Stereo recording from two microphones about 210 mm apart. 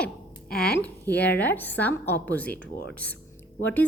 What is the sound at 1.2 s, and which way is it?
A woman's voice, 10° left (ahead or behind).